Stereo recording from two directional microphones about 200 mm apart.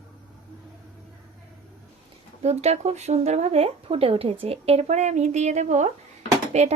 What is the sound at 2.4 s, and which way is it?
Speech, 30° right (ahead or behind).